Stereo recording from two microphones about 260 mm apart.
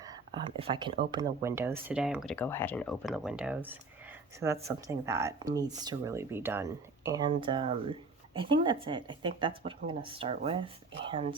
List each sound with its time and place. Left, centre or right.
0.0 s speech: centre